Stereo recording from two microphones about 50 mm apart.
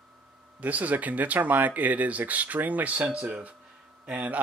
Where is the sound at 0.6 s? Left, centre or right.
Right.